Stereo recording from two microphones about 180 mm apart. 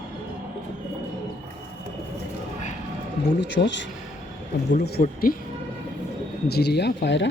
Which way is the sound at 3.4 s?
75° left (ahead or behind).